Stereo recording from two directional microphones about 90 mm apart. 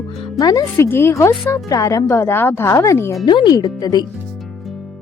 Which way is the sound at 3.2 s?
55° left (ahead or behind).